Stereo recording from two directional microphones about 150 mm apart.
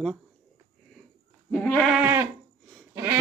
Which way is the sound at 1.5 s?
10° left (ahead or behind).